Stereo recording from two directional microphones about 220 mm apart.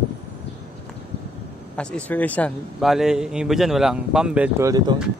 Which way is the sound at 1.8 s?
5° left (ahead or behind).